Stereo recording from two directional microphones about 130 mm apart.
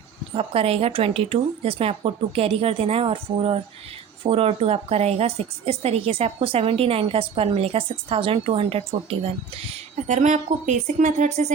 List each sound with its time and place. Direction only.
0.3 s a woman's voice: 50° right (ahead or behind)
10.1 s speech: 70° right (ahead or behind)